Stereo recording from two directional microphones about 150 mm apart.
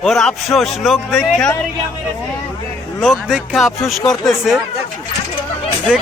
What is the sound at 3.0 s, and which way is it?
A man's voice, 5° right (ahead or behind).